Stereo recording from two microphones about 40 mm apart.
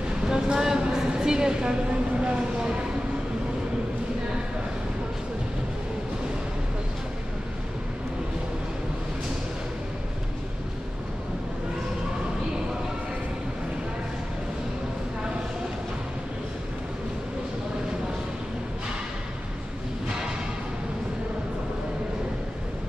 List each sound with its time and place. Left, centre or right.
0.3 s a woman's voice: centre